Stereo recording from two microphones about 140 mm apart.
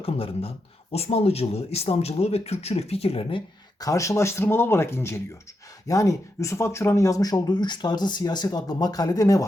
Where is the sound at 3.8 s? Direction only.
20° left (ahead or behind).